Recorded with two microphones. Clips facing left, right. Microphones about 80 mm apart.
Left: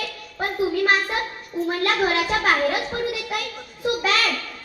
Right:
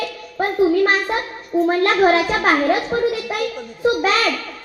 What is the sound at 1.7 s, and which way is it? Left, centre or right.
A child's voice, right.